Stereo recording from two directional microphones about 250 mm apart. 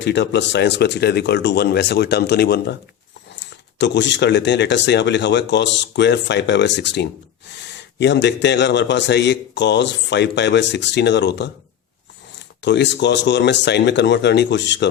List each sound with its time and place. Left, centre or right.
0.0 s speech: left